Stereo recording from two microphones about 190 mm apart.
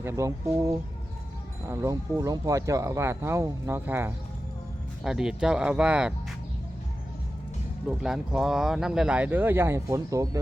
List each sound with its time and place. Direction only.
0.0 s speech: 15° right (ahead or behind)
7.9 s speech: 5° right (ahead or behind)